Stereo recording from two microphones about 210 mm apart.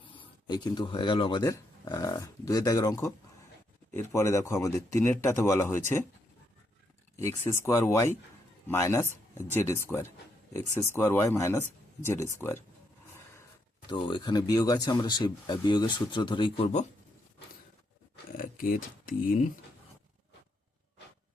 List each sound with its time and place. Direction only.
0.0 s speech: 20° left (ahead or behind)
7.2 s speech: 15° left (ahead or behind)
13.9 s speech: 25° left (ahead or behind)
18.3 s speech: 40° left (ahead or behind)